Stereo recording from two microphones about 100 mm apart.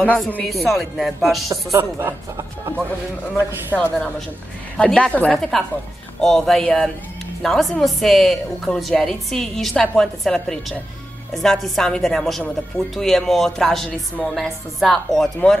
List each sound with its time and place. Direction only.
0.0 s a woman's voice: 15° left (ahead or behind)
0.5 s a woman's voice: centre (ahead or behind)
1.8 s speech: 25° right (ahead or behind)
3.7 s a woman's voice: 5° left (ahead or behind)